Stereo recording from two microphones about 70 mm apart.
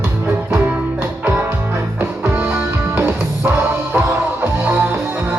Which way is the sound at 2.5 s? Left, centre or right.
Right.